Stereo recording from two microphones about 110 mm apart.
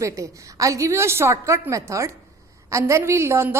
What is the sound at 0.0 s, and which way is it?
A woman's voice, 30° right (ahead or behind).